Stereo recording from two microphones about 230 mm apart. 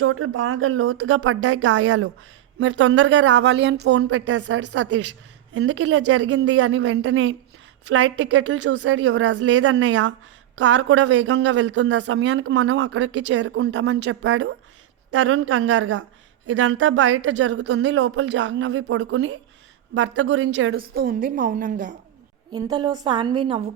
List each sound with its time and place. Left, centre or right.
0.0 s a woman's voice: right
2.6 s a woman's voice: right
20.9 s a woman's voice: right
22.5 s a woman's voice: centre